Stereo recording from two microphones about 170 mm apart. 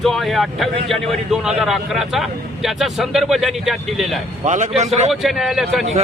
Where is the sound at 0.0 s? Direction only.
Centre (ahead or behind).